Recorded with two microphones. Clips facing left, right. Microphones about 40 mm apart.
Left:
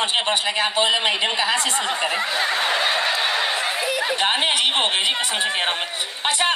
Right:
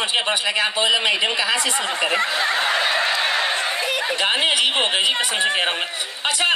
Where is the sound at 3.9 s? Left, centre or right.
Right.